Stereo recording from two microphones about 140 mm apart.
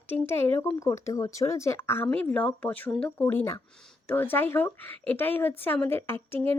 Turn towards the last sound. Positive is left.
turn(degrees=15)  # may be behind; listen again after turning